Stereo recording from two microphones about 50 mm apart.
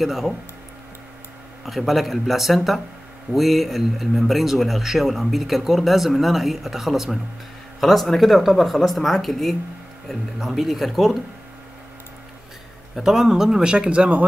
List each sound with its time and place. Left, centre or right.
0.0 s a man's voice: centre
1.7 s a man's voice: centre
13.0 s speech: centre; by 14.2 s right